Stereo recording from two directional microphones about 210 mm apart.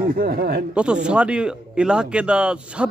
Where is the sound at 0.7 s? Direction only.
5° right (ahead or behind).